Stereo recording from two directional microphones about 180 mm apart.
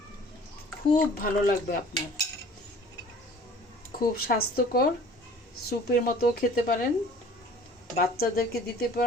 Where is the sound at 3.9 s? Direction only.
55° left (ahead or behind).